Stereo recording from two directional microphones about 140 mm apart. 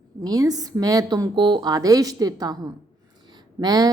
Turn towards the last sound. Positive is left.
turn(degrees=-25)  # may be behind; listen again after turning